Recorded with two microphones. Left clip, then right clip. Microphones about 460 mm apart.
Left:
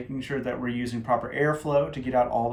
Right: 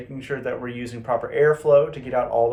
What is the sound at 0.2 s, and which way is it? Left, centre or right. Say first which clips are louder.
Speech: right 3 dB; centre.